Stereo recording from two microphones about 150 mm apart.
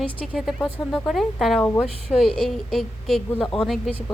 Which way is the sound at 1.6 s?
10° left (ahead or behind).